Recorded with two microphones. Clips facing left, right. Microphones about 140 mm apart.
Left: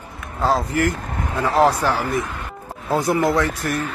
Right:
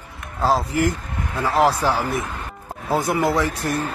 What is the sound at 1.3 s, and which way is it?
Speech, 25° left (ahead or behind).